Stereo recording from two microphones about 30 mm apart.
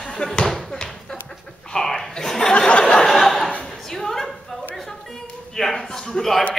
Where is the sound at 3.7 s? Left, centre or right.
Centre.